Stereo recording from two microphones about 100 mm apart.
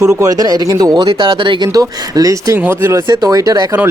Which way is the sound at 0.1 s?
35° right (ahead or behind).